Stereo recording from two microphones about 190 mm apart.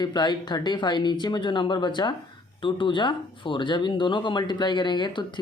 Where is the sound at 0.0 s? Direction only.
20° left (ahead or behind).